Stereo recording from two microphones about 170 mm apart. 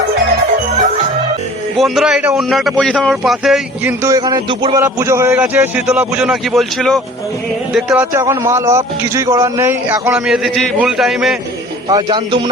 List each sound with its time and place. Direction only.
1.8 s speech: centre (ahead or behind)
4.0 s speech: 20° right (ahead or behind)
4.8 s a man's voice: 15° right (ahead or behind); by 7.0 s centre (ahead or behind)
7.9 s a man's voice: 15° right (ahead or behind); by 11.3 s centre (ahead or behind)
11.9 s speech: 25° right (ahead or behind)